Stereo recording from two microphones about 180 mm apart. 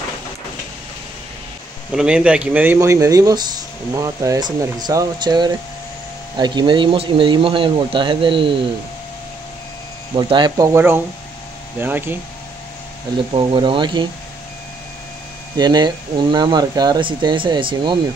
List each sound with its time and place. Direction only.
2.0 s speech: 5° right (ahead or behind); by 8.5 s 30° right (ahead or behind)
10.1 s speech: 25° right (ahead or behind)
10.7 s speech: 10° right (ahead or behind)
13.3 s speech: 30° right (ahead or behind)
15.5 s speech: 25° right (ahead or behind)